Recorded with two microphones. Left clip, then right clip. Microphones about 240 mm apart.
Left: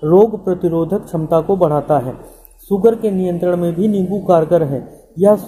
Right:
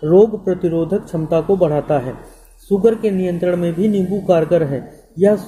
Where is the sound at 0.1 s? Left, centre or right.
Centre.